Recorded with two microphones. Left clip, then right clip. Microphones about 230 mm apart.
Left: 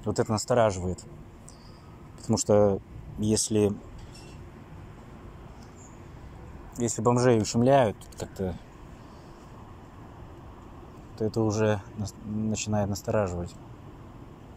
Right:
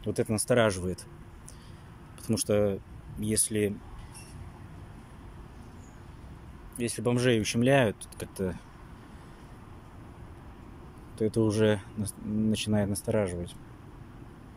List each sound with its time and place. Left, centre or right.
0.0 s speech: right
0.7 s speech: centre
2.2 s speech: centre
7.0 s speech: right
7.2 s speech: centre
11.1 s speech: centre